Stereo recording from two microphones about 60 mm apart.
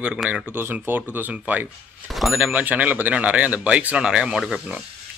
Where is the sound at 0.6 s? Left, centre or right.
Right.